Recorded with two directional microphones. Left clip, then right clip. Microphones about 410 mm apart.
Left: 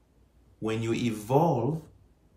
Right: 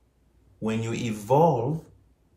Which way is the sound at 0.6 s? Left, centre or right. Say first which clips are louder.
Even; centre.